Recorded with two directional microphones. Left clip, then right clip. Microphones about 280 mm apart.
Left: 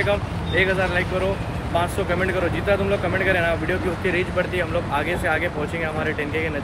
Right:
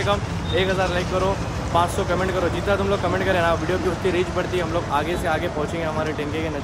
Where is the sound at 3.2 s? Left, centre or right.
Centre.